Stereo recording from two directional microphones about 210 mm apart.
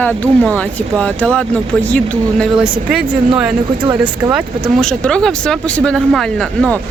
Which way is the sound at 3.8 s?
25° right (ahead or behind).